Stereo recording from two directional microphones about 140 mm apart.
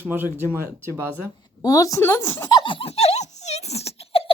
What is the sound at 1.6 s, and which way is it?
Speech, 25° left (ahead or behind).